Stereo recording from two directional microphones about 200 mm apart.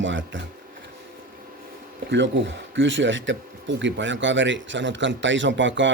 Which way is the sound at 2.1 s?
65° right (ahead or behind).